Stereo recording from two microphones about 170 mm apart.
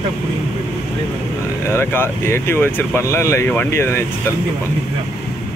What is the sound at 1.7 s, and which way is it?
Speech, 15° left (ahead or behind).